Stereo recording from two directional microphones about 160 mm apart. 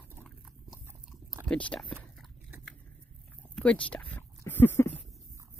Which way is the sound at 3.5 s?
5° left (ahead or behind).